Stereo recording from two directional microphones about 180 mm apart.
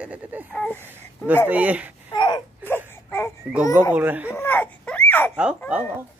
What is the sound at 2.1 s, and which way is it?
Wail, 25° left (ahead or behind).